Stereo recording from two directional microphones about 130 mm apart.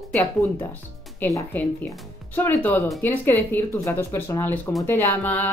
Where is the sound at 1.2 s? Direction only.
15° left (ahead or behind).